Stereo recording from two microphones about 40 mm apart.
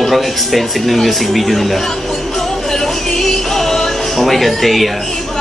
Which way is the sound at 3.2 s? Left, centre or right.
Centre.